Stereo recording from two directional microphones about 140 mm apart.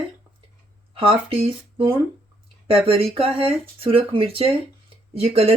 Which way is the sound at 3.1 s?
40° right (ahead or behind).